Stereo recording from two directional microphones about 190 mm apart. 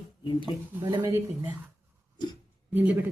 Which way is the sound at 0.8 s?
15° right (ahead or behind).